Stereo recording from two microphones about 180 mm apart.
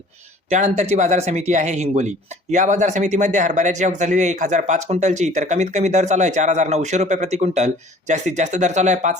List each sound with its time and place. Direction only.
0.5 s speech: 40° right (ahead or behind)